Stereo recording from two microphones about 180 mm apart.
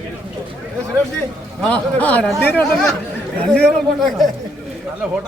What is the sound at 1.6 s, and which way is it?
Speech, 5° left (ahead or behind).